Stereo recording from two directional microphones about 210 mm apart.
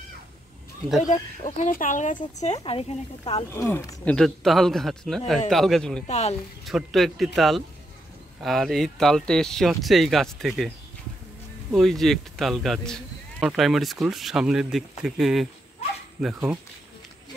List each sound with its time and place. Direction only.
1.0 s speech: 35° left (ahead or behind)
3.5 s speech: 15° left (ahead or behind)
6.0 s speech: 35° left (ahead or behind)
6.6 s speech: centre (ahead or behind)
11.7 s speech: centre (ahead or behind)